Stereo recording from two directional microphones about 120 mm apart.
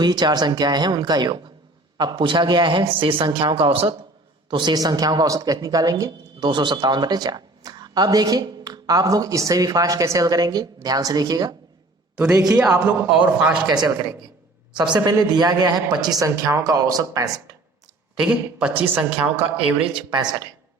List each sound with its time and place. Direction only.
0.0 s speech: 35° right (ahead or behind)
12.5 s a man's voice: 20° right (ahead or behind)
13.7 s speech: 35° right (ahead or behind)
18.2 s a man's voice: 10° right (ahead or behind)
19.9 s speech: 40° right (ahead or behind)